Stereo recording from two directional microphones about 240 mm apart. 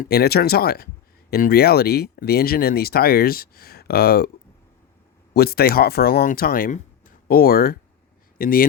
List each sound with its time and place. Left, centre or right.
0.0 s speech: left
5.3 s speech: left